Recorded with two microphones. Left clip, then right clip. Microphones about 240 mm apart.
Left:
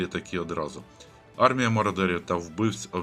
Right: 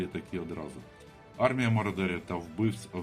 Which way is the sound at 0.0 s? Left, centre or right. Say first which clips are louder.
Left 6 dB; centre.